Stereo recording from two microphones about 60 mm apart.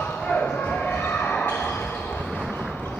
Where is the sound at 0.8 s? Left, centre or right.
Left.